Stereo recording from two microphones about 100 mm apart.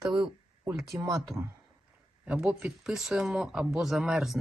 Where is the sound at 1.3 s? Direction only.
30° left (ahead or behind).